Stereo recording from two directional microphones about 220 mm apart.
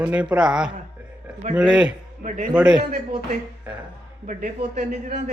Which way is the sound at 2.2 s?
35° right (ahead or behind).